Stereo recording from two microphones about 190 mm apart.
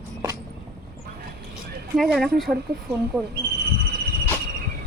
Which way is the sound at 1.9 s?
Centre (ahead or behind).